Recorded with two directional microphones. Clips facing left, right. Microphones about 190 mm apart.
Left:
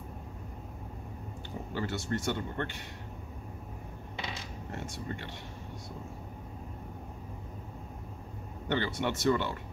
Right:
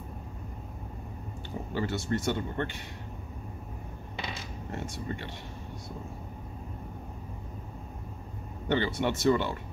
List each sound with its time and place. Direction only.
1.7 s speech: 15° right (ahead or behind)
8.7 s speech: 20° right (ahead or behind)